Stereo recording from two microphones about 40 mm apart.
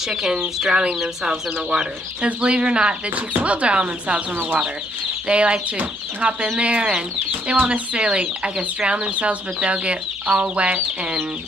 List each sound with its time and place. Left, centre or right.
0.1 s speech: centre
0.7 s speech: right
5.3 s speech: right
7.5 s speech: right
7.9 s speech: right